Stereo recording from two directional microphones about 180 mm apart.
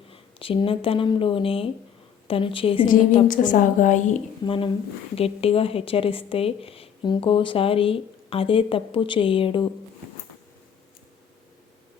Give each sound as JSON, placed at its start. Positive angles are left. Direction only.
{"t": 0.1, "sound": "a woman's voice", "side_deg": 30}
{"t": 3.2, "sound": "a woman's voice", "side_deg": 45}
{"t": 4.4, "sound": "a woman's voice", "side_deg": 30}